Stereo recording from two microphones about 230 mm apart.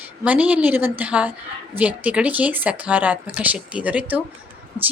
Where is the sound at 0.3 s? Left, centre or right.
Centre.